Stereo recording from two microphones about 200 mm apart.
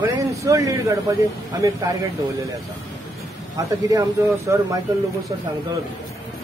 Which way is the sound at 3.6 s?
15° right (ahead or behind).